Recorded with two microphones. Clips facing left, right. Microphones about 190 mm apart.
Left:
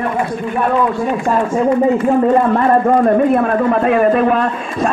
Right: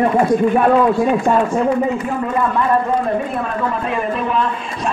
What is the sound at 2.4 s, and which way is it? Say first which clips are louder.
A man's voice: left 4 dB; 55° left (ahead or behind).